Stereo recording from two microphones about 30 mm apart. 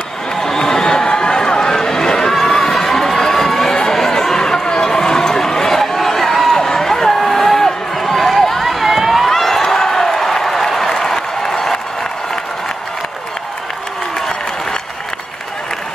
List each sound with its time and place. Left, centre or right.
0.4 s run: centre
2.4 s crowd: centre
3.4 s a sound: centre
8.6 s run: centre
9.2 s a sound: centre
9.7 s applause: centre